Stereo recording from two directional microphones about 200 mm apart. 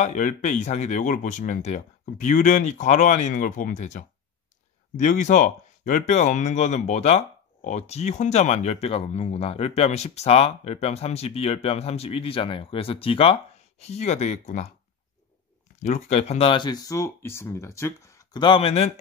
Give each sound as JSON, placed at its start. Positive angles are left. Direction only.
{"t": 0.0, "sound": "speech", "side_deg": 40}
{"t": 15.8, "sound": "speech", "side_deg": 35}